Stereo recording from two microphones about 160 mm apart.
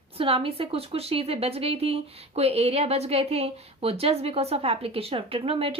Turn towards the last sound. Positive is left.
turn(degrees=-35)  # may be behind; listen again after turning